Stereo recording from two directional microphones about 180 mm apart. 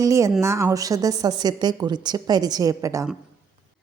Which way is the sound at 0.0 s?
20° right (ahead or behind).